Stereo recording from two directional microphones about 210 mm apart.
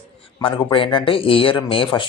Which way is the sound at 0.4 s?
25° left (ahead or behind).